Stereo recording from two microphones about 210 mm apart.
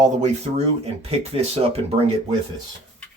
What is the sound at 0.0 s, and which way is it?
Speech, 35° right (ahead or behind).